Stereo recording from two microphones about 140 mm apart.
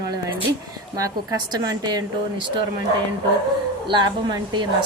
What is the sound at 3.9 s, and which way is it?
Speech, 35° right (ahead or behind).